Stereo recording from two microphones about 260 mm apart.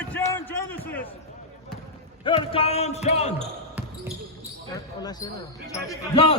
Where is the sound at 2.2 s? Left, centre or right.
Centre.